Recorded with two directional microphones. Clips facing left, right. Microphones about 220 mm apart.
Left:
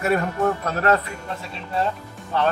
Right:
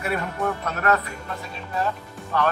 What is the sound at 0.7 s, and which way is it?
Speech, 30° left (ahead or behind).